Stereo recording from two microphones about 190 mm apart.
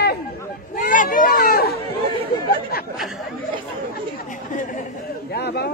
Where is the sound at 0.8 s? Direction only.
45° left (ahead or behind).